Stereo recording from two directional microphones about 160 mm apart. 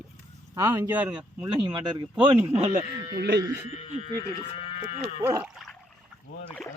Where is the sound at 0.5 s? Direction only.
15° right (ahead or behind).